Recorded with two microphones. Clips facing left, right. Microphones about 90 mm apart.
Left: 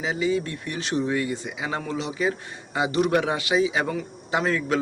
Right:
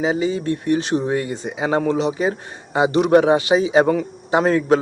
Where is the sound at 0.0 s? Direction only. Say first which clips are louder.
Right 5 dB; 30° right (ahead or behind).